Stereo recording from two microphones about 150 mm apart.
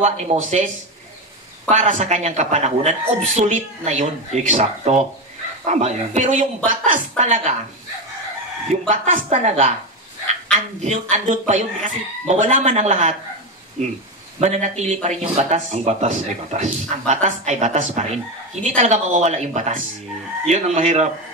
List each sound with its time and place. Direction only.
0.0 s speech: 50° right (ahead or behind)
1.7 s speech: 55° right (ahead or behind)
8.8 s speech: 55° right (ahead or behind)